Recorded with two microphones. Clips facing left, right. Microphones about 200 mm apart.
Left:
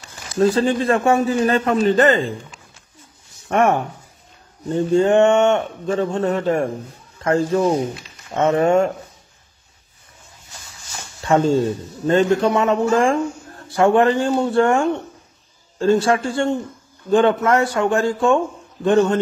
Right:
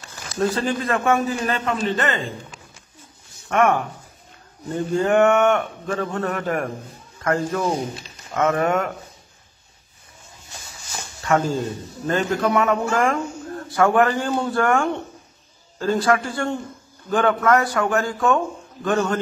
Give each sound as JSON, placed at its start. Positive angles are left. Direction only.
{"t": 0.4, "sound": "a man's voice", "side_deg": 30}
{"t": 3.4, "sound": "speech", "side_deg": 30}
{"t": 11.2, "sound": "speech", "side_deg": 25}